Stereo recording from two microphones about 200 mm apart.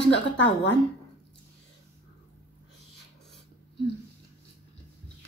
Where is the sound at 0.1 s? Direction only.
65° left (ahead or behind).